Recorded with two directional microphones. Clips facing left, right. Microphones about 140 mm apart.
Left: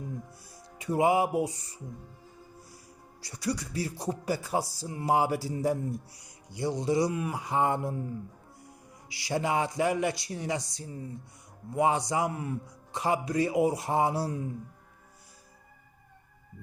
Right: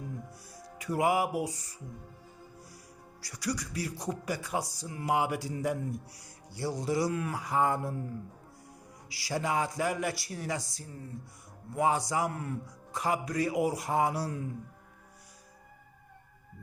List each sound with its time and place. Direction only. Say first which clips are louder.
0.5 s speech: left 3 dB; 25° left (ahead or behind)
3.2 s speech: left 2 dB; 25° left (ahead or behind)
6.2 s speech: left 4 dB; 20° left (ahead or behind)
9.0 s speech: left 3 dB; 20° left (ahead or behind)